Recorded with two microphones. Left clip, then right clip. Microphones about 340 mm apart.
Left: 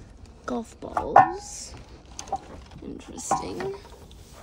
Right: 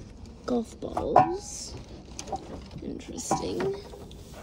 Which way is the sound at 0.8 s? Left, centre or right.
Centre.